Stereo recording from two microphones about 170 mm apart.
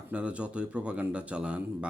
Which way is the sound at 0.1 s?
5° right (ahead or behind).